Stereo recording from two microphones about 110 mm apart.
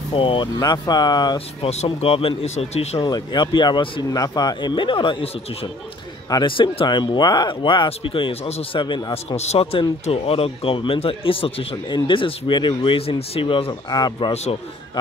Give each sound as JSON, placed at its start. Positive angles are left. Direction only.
{"t": 0.1, "sound": "speech", "side_deg": 50}
{"t": 0.6, "sound": "speech", "side_deg": 40}
{"t": 1.6, "sound": "speech", "side_deg": 75}
{"t": 1.9, "sound": "speech", "side_deg": 55}
{"t": 3.0, "sound": "speech", "side_deg": 40}
{"t": 4.1, "sound": "speech", "side_deg": 35}
{"t": 8.7, "sound": "speech", "side_deg": 45}
{"t": 9.4, "sound": "speech", "side_deg": 70}
{"t": 11.7, "sound": "speech", "side_deg": 45}
{"t": 14.3, "sound": "speech", "side_deg": 70}